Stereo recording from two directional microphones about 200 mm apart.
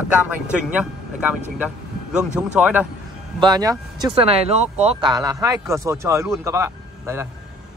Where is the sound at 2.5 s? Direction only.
5° right (ahead or behind).